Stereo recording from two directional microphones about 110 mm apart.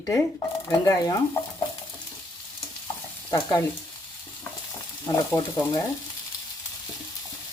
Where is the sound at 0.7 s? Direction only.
40° left (ahead or behind).